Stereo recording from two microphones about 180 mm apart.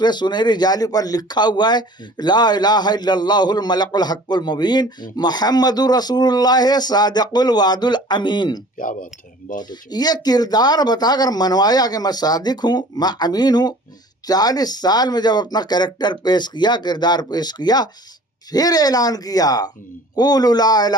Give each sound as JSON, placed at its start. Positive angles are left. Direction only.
{"t": 0.0, "sound": "speech", "side_deg": 25}
{"t": 8.8, "sound": "speech", "side_deg": 50}
{"t": 9.6, "sound": "speech", "side_deg": 25}